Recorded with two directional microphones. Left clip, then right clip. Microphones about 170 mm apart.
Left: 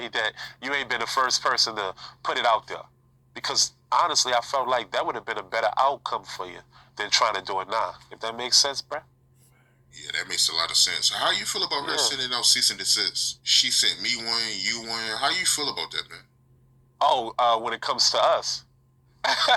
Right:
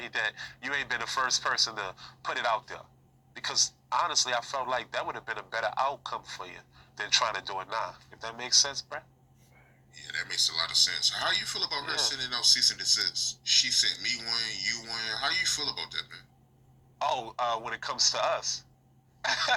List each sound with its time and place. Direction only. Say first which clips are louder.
0.0 s speech: left 4 dB; 45° left (ahead or behind)